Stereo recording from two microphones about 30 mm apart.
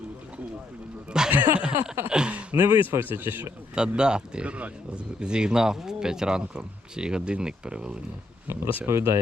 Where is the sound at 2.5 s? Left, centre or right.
Right.